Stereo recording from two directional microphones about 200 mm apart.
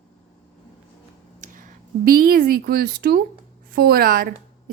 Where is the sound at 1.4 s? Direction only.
40° right (ahead or behind).